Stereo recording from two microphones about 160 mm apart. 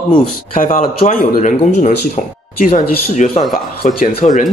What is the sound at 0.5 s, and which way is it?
A man's voice, 60° left (ahead or behind).